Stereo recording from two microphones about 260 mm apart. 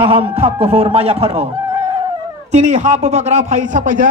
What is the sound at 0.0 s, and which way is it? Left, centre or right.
A man's voice, right.